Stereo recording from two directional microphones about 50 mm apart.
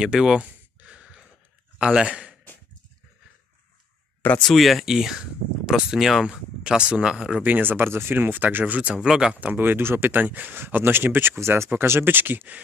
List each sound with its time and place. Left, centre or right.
0.0 s speech: centre
0.4 s a sound: right
2.0 s speech: centre
4.4 s speech: centre
6.2 s speech: centre
7.4 s speech: right
8.9 s speech: centre
9.4 s speech: right
11.3 s speech: right
11.7 s speech: right